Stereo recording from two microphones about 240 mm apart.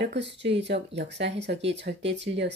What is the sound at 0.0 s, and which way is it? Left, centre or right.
A woman's voice, right.